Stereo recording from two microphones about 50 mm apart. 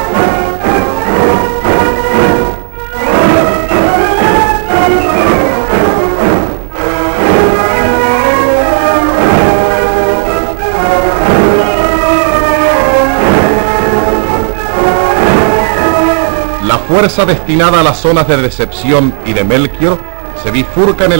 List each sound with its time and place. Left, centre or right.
0.1 s music: left
20.5 s a man's voice: centre